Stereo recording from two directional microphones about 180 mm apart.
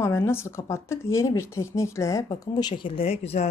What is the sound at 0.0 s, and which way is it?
A woman's voice, 15° left (ahead or behind).